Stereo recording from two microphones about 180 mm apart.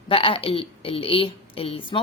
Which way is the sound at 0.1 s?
30° left (ahead or behind).